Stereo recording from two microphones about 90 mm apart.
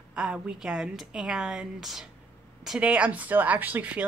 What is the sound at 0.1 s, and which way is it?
Speech, 10° right (ahead or behind).